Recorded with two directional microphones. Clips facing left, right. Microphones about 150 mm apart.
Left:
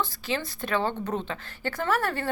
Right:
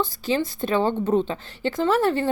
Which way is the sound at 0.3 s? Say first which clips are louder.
Right 7 dB; 30° right (ahead or behind).